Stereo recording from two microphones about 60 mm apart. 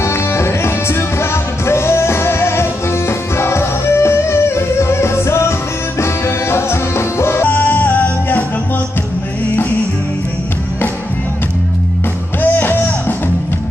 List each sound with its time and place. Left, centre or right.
0.0 s music: left
7.4 s music: left
12.4 s music: left